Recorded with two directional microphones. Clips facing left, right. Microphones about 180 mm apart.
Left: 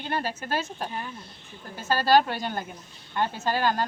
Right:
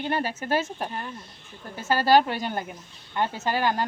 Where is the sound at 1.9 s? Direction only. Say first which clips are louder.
Right 1 dB; 20° right (ahead or behind).